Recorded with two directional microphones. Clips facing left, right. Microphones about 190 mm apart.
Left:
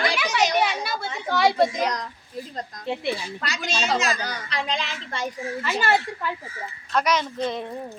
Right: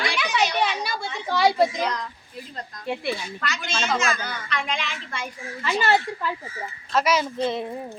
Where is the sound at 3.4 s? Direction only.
35° left (ahead or behind).